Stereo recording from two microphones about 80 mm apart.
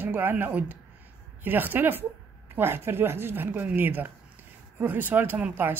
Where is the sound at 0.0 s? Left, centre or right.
Right.